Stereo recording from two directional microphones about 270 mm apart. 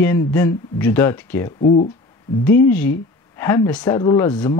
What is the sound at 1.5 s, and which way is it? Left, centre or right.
Speech, left.